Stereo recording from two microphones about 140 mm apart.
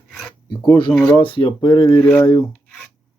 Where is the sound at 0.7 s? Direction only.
35° left (ahead or behind).